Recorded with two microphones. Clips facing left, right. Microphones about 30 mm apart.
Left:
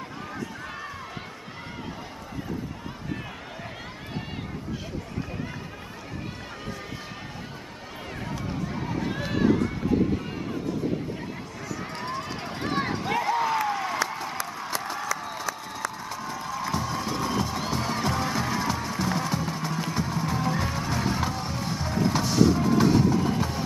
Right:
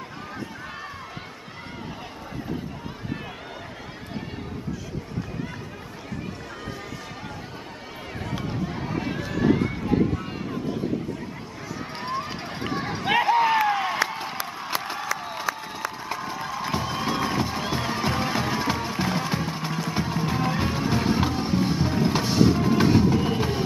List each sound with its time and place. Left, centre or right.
8.7 s run: centre
9.2 s run: centre
9.5 s run: right
11.7 s run: centre
13.1 s a sound: right
19.9 s music: right